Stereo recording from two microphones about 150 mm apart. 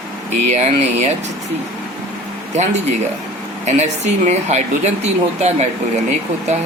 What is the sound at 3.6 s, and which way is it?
Speech, 50° right (ahead or behind).